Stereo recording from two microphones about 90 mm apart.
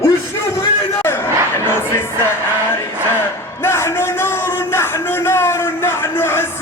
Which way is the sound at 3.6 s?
30° left (ahead or behind).